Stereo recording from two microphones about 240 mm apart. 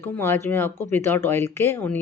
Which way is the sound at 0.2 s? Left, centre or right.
Centre.